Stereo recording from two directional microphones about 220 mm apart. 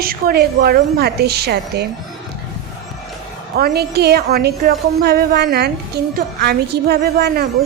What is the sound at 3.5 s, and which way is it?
A woman's voice, 45° right (ahead or behind).